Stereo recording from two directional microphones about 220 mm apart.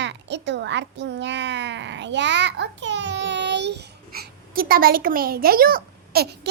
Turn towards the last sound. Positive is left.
turn(degrees=-45)  # may be behind; listen again after turning